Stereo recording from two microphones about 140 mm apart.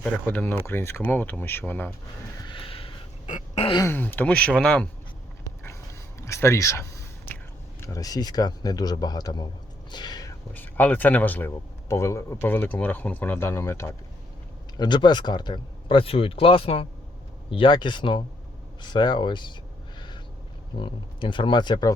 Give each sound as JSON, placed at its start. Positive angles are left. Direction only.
{"t": 0.0, "sound": "speech", "side_deg": 10}
{"t": 2.4, "sound": "a sound", "side_deg": 35}
{"t": 3.2, "sound": "a sound", "side_deg": 55}
{"t": 3.8, "sound": "speech", "side_deg": 15}
{"t": 5.4, "sound": "a sound", "side_deg": 20}
{"t": 7.8, "sound": "a man's voice", "side_deg": 25}
{"t": 9.9, "sound": "whispering", "side_deg": 30}
{"t": 10.5, "sound": "speech", "side_deg": 10}
{"t": 14.8, "sound": "speech", "side_deg": 30}
{"t": 20.7, "sound": "speech", "side_deg": 35}